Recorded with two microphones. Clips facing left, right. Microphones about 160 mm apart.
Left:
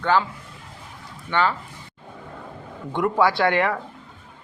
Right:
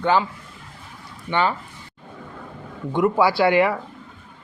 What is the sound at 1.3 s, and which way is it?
Speech, 15° right (ahead or behind).